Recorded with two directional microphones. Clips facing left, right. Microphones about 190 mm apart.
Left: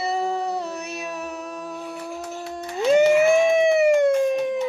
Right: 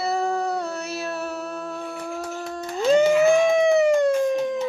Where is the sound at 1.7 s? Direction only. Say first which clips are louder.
Right 1 dB; centre (ahead or behind).